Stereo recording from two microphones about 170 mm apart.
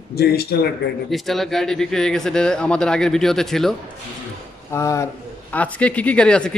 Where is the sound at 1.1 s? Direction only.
Centre (ahead or behind).